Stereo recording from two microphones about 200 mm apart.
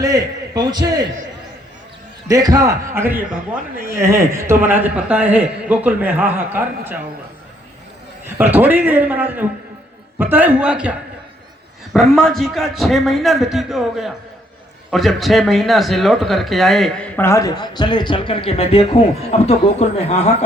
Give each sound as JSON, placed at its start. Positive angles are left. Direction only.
{"t": 0.0, "sound": "a man's voice", "side_deg": -20}
{"t": 2.2, "sound": "speech", "side_deg": -20}
{"t": 8.4, "sound": "speech", "side_deg": -10}
{"t": 11.9, "sound": "speech", "side_deg": 0}